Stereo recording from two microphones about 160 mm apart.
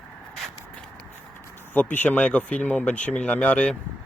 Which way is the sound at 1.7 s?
10° left (ahead or behind).